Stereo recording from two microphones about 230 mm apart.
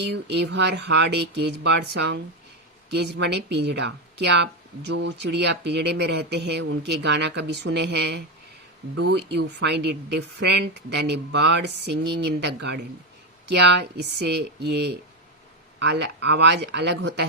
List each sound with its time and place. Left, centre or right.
0.0 s speech: right